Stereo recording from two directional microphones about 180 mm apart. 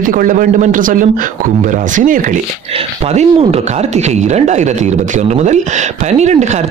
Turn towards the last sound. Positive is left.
turn(degrees=-40)  # may be behind; listen again after turning